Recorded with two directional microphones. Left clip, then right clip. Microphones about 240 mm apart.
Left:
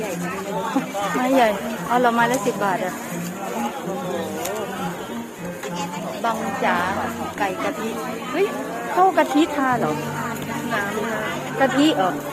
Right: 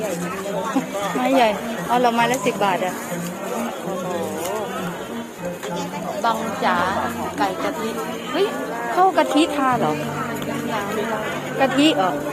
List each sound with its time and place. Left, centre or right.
1.2 s a woman's voice: centre
6.2 s a woman's voice: centre
9.0 s a woman's voice: centre
11.6 s a woman's voice: centre